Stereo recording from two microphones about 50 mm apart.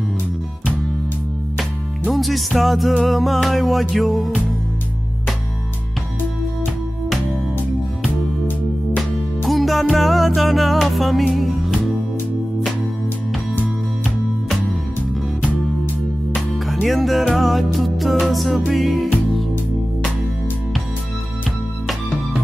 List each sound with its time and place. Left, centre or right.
1.6 s music: centre
9.5 s music: centre
16.3 s music: centre